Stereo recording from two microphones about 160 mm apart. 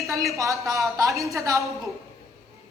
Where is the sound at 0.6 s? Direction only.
Centre (ahead or behind).